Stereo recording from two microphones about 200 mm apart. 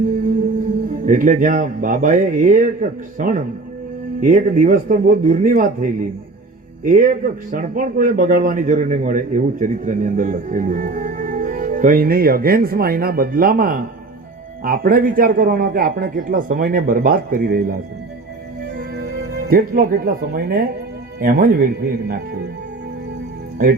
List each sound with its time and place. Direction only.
1.0 s a man's voice: 40° right (ahead or behind)
19.3 s a man's voice: 45° right (ahead or behind)